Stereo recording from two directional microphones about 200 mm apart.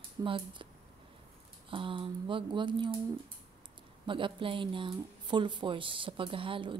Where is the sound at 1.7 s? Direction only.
25° right (ahead or behind).